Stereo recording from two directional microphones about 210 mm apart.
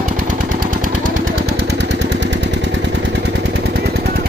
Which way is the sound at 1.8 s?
55° right (ahead or behind).